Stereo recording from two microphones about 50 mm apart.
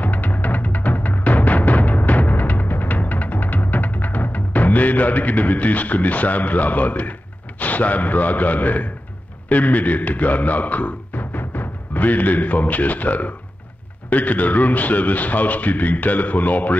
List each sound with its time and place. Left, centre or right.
0.0 s music: left
9.5 s a man's voice: left